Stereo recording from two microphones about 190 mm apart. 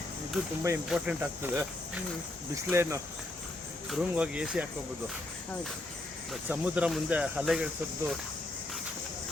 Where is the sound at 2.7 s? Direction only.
15° right (ahead or behind).